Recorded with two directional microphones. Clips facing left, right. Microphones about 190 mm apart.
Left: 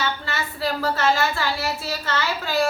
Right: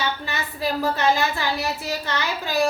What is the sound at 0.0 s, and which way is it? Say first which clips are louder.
A woman's voice: even; 15° right (ahead or behind).